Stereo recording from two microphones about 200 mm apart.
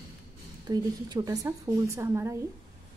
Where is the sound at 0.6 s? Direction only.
20° right (ahead or behind).